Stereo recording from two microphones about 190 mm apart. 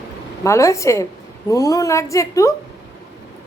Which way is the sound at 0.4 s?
15° left (ahead or behind).